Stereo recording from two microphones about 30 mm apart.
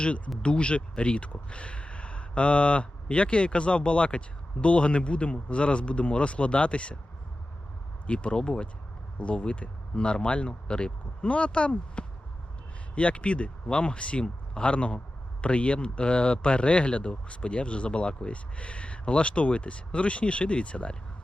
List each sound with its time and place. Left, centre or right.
0.4 s speech: left
8.0 s speech: left